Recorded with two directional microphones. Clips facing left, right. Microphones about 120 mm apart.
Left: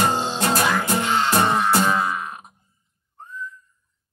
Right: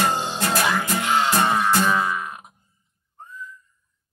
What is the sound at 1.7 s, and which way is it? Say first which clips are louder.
Music: left 1 dB; 25° left (ahead or behind).